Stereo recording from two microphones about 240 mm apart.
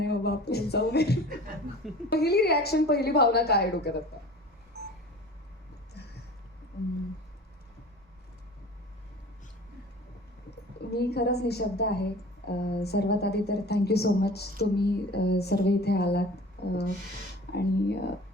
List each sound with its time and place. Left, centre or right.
0.0 s a woman's voice: left
10.9 s a woman's voice: left
16.6 s a sound: left
17.5 s a woman's voice: left